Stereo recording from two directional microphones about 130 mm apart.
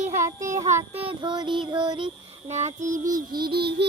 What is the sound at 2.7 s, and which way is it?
Child singing, 80° right.